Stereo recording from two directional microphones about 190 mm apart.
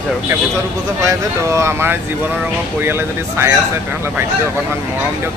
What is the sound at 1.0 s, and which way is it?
A man's voice, 15° right (ahead or behind).